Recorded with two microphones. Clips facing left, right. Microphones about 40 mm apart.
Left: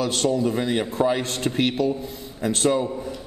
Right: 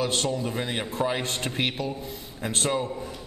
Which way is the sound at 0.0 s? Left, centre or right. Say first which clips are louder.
Left 5 dB; centre.